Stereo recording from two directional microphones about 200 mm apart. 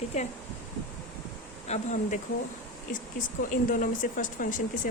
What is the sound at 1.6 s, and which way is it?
Speech, 35° left (ahead or behind).